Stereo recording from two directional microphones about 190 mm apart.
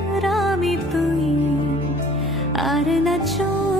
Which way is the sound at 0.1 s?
Centre (ahead or behind).